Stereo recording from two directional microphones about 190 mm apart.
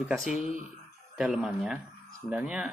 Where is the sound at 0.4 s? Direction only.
45° right (ahead or behind).